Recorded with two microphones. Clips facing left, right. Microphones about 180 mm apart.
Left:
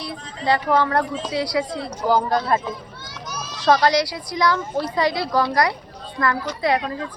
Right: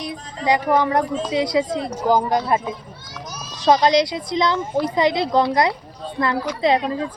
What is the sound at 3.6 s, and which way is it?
A woman's voice, 20° right (ahead or behind).